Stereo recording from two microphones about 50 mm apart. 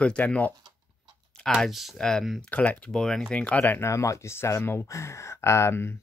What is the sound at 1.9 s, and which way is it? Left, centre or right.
Speech, centre.